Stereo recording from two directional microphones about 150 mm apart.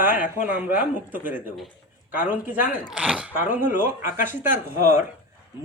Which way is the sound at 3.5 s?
60° left (ahead or behind).